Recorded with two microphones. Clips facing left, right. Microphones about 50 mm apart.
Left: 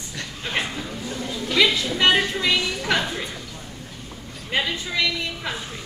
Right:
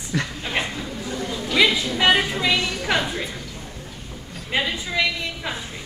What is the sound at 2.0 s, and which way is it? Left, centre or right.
Speech, centre.